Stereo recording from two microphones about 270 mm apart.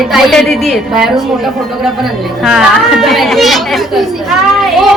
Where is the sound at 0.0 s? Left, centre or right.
Centre.